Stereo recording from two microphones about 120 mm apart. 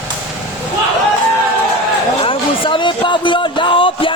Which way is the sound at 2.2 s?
45° left (ahead or behind).